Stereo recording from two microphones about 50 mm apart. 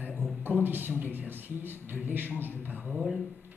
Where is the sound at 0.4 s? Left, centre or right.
Right.